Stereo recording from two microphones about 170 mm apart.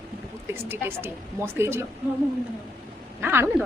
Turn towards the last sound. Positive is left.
turn(degrees=-15)  # may be behind; listen again after turning